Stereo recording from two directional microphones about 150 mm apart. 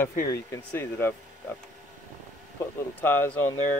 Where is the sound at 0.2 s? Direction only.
20° left (ahead or behind).